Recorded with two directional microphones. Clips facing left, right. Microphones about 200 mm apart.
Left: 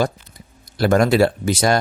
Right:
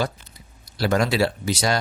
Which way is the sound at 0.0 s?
50° left (ahead or behind).